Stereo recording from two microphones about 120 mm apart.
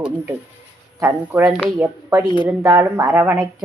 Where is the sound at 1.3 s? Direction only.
10° right (ahead or behind).